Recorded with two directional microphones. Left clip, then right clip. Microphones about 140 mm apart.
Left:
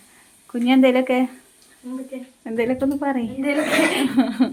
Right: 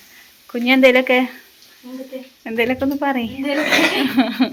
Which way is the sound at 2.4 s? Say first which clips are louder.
Right 3 dB; centre (ahead or behind).